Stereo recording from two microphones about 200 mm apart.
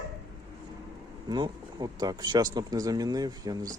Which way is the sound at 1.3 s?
20° right (ahead or behind).